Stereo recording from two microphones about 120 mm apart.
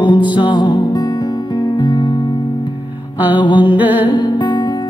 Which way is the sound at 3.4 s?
40° left (ahead or behind).